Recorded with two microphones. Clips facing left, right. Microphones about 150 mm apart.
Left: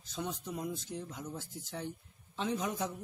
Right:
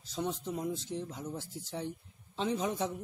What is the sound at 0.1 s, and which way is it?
Speech, 30° right (ahead or behind).